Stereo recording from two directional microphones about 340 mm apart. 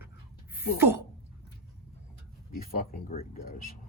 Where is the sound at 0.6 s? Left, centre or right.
Left.